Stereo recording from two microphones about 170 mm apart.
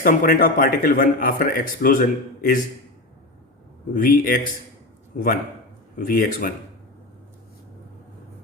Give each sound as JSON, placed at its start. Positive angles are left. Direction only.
{"t": 0.0, "sound": "a man's voice", "side_deg": 55}
{"t": 3.9, "sound": "a man's voice", "side_deg": 60}